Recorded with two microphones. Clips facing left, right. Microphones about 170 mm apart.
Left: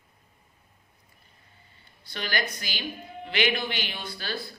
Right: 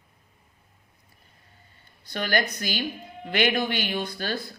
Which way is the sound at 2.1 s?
50° right (ahead or behind).